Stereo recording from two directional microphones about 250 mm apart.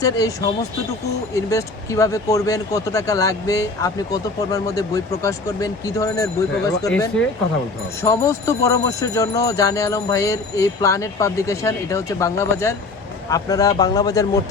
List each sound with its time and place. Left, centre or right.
0.0 s speech: centre